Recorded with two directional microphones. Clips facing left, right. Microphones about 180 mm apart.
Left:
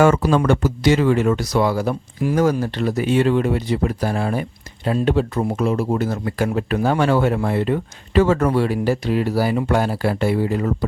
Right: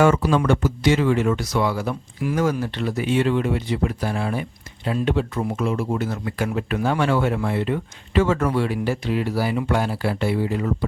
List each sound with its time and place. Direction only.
0.0 s speech: 40° left (ahead or behind)